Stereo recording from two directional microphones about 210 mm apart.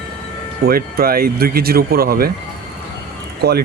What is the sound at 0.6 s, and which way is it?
Speech, 45° right (ahead or behind).